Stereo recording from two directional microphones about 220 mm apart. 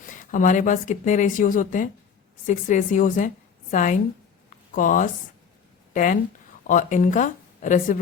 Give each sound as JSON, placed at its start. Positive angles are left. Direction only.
{"t": 0.0, "sound": "a woman's voice", "side_deg": 35}
{"t": 4.4, "sound": "a sound", "side_deg": 35}
{"t": 5.9, "sound": "speech", "side_deg": 35}